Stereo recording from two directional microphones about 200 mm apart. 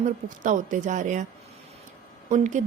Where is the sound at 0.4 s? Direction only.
40° right (ahead or behind).